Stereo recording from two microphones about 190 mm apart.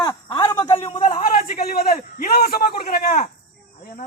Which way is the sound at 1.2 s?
50° left (ahead or behind).